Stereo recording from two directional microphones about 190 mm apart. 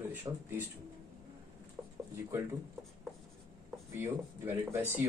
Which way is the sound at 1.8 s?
5° right (ahead or behind).